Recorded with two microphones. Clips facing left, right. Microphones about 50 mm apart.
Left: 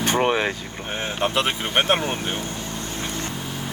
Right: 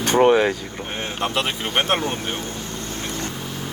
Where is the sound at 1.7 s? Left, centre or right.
Centre.